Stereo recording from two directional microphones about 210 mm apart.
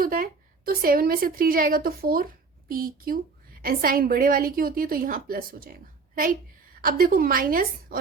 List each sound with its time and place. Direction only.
0.0 s a woman's voice: 45° right (ahead or behind)
6.8 s a woman's voice: 45° right (ahead or behind)